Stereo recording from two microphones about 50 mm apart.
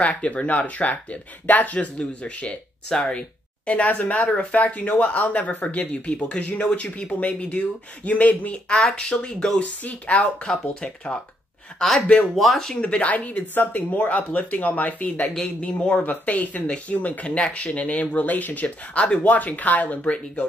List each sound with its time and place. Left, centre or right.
0.0 s speech: left
9.6 s speech: left
12.4 s speech: centre
12.8 s speech: left
15.4 s speech: centre
16.1 s speech: left